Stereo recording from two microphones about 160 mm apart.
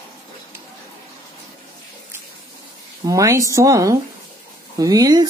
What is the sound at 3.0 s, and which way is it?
Speech, 20° right (ahead or behind).